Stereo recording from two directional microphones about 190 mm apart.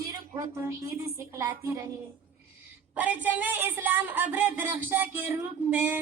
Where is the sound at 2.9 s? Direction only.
10° right (ahead or behind).